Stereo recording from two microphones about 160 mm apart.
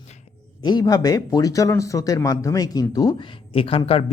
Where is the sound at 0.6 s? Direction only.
25° left (ahead or behind).